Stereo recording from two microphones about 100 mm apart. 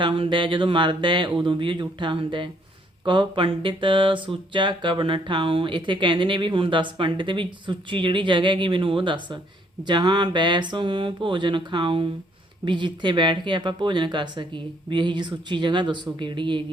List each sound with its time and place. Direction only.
0.0 s speech: 60° right (ahead or behind)